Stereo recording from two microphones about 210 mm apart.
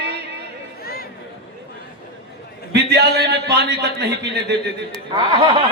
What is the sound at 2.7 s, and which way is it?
A man's voice, 50° right (ahead or behind).